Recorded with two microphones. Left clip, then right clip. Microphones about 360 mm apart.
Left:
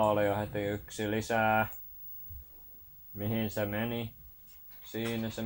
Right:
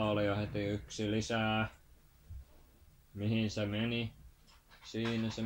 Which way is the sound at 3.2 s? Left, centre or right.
Left.